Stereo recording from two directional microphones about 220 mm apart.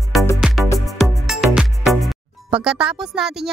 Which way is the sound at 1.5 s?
Centre (ahead or behind).